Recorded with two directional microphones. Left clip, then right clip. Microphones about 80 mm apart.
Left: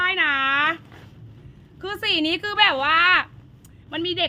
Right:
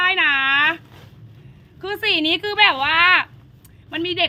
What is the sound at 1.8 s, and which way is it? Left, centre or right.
A woman's voice, left.